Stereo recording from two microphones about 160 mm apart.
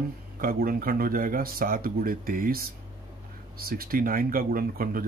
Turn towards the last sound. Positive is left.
turn(degrees=-65)  # may be behind; listen again after turning